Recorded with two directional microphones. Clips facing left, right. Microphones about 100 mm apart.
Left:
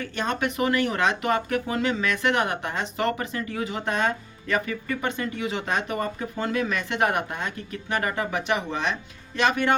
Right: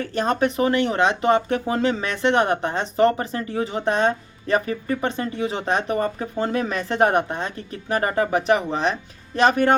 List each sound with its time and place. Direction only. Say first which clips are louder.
0.0 s speech: right 6 dB; 35° right (ahead or behind)